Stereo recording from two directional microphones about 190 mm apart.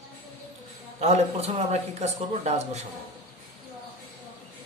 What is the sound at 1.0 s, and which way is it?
A man's voice, 35° right (ahead or behind).